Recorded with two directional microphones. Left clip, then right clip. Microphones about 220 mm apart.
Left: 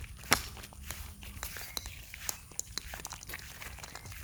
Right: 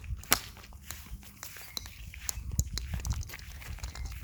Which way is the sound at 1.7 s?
5° right (ahead or behind).